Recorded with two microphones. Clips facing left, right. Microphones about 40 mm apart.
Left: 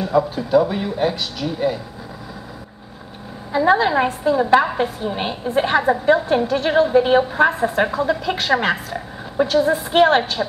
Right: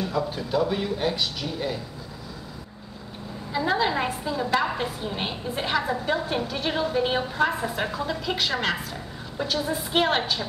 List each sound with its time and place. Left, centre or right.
0.1 s a woman's voice: centre
3.5 s a woman's voice: centre
6.2 s a woman's voice: centre